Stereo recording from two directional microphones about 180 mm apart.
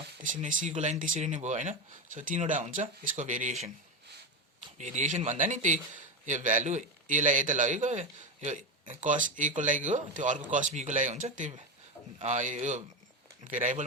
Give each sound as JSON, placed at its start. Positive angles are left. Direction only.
{"t": 0.2, "sound": "a man's voice", "side_deg": -45}
{"t": 4.8, "sound": "a man's voice", "side_deg": -40}